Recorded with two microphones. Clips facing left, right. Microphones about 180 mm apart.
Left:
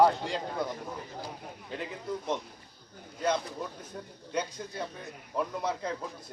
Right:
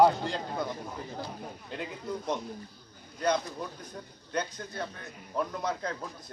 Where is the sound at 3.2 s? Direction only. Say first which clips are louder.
Right 1 dB; 5° left (ahead or behind).